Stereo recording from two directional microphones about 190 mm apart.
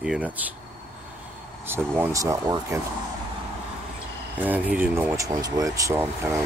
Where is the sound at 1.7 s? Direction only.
10° right (ahead or behind).